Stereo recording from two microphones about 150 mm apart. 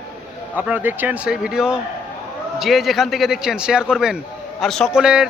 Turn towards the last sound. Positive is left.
turn(degrees=-5)  # may be behind; listen again after turning